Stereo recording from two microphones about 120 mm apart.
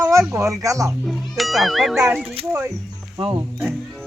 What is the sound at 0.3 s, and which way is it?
Speech, 25° right (ahead or behind).